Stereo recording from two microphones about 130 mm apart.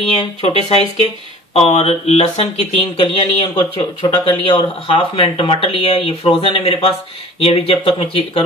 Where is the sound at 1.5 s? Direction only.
50° left (ahead or behind).